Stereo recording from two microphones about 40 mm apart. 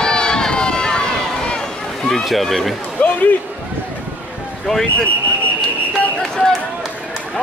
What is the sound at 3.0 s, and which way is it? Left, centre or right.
Speech, left.